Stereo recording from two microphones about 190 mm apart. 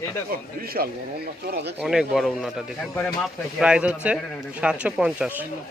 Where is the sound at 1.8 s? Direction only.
5° right (ahead or behind).